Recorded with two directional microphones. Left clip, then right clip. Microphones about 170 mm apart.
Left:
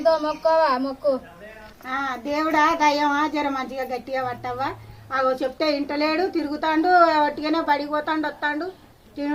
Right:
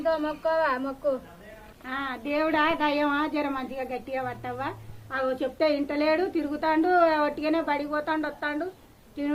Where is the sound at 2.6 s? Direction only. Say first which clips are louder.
Left 9 dB; 5° left (ahead or behind).